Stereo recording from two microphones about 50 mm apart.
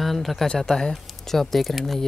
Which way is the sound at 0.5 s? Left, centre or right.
Centre.